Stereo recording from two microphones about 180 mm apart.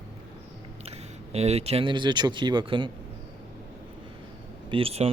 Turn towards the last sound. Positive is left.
turn(degrees=-30)  # may be behind; listen again after turning